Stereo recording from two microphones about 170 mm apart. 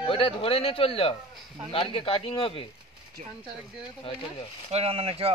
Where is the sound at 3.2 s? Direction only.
45° right (ahead or behind).